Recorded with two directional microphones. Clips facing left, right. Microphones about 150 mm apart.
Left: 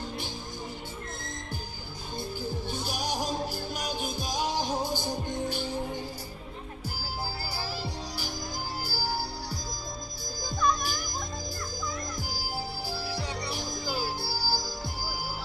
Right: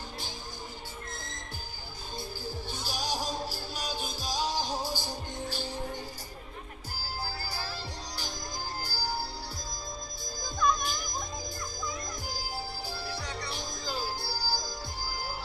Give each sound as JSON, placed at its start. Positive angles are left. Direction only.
{"t": 2.8, "sound": "music", "side_deg": 15}
{"t": 7.5, "sound": "music", "side_deg": 10}
{"t": 10.6, "sound": "music", "side_deg": 5}
{"t": 12.9, "sound": "music", "side_deg": 10}